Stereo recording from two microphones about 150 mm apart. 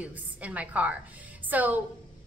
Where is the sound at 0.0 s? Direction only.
10° right (ahead or behind).